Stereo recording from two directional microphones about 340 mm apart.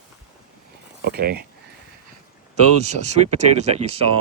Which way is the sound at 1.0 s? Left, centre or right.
Right.